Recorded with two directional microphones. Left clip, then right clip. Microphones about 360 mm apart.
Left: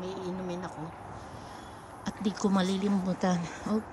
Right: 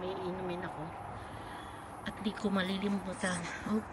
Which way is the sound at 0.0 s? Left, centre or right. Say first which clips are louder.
Left 1 dB; centre.